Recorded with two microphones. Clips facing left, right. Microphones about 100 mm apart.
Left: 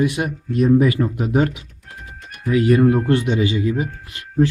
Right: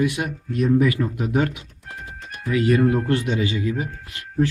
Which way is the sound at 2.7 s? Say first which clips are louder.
Left 4 dB; 25° left (ahead or behind).